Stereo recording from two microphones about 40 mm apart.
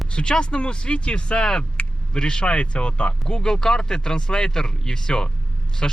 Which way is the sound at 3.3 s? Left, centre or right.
Centre.